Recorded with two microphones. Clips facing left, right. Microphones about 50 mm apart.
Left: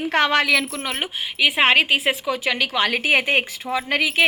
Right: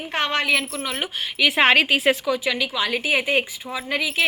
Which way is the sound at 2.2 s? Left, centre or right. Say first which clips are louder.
Even; left.